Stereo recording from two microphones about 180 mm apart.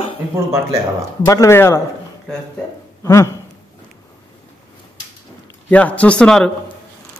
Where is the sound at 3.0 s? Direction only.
15° left (ahead or behind).